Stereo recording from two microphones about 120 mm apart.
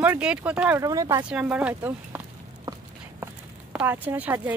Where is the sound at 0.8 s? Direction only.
30° right (ahead or behind).